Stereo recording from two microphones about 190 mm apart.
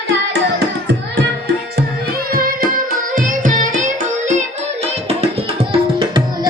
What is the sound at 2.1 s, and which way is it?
Music, 50° right (ahead or behind).